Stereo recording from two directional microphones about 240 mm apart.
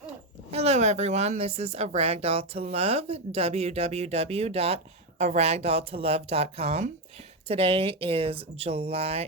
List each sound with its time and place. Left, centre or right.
0.5 s speech: right